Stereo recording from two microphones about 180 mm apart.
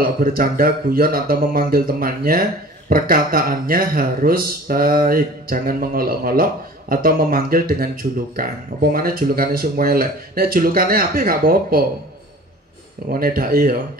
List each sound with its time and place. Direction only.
0.0 s speech: 55° right (ahead or behind)
13.1 s speech: 55° right (ahead or behind)